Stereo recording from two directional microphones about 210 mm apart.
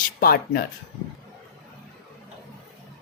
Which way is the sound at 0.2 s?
45° left (ahead or behind).